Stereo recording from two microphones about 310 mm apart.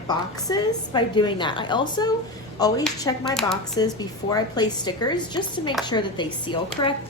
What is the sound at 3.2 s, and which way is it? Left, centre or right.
Speech, centre.